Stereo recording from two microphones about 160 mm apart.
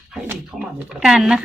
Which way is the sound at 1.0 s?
5° right (ahead or behind).